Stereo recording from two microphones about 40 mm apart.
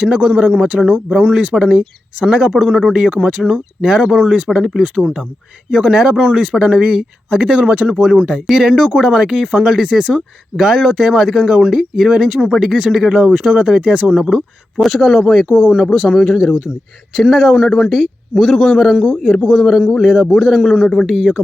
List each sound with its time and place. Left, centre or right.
0.1 s speech: centre
4.2 s speech: right
4.4 s speech: centre; by 8.0 s right
8.5 s speech: centre
14.3 s speech: centre
20.8 s speech: centre
21.1 s speech: centre